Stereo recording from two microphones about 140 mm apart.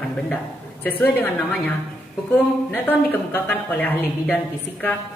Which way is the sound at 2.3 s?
15° left (ahead or behind).